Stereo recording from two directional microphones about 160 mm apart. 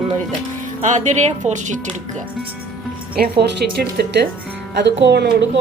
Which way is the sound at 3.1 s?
80° right.